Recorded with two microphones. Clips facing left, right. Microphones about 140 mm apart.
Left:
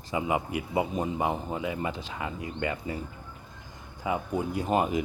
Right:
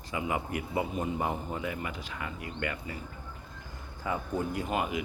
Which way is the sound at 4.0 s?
15° left (ahead or behind).